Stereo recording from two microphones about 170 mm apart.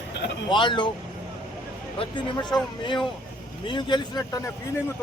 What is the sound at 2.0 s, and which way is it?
Speech, 25° left (ahead or behind).